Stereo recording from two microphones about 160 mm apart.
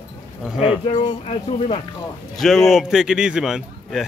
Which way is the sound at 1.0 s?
40° left (ahead or behind).